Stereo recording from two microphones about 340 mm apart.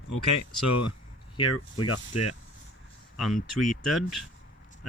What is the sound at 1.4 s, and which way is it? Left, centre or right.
Speech, left.